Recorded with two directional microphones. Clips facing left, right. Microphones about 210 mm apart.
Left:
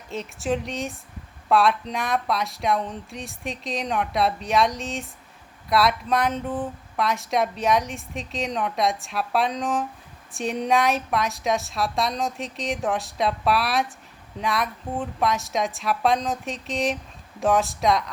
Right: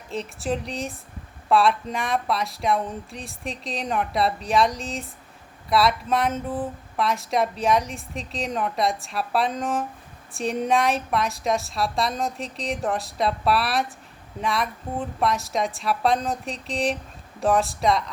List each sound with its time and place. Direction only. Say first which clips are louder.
0.1 s speech: left 1 dB; centre (ahead or behind)